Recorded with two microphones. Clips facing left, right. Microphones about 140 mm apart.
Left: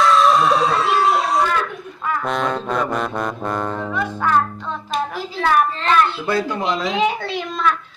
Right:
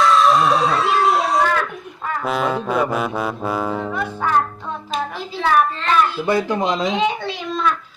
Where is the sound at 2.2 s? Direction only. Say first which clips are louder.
Right 3 dB; 5° right (ahead or behind).